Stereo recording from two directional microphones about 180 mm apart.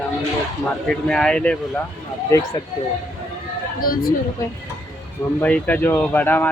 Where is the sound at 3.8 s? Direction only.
55° left (ahead or behind).